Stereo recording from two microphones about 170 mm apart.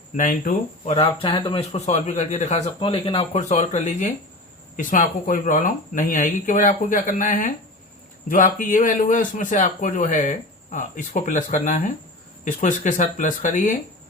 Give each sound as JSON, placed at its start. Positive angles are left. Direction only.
{"t": 0.2, "sound": "a man's voice", "side_deg": 50}
{"t": 0.9, "sound": "a man's voice", "side_deg": 30}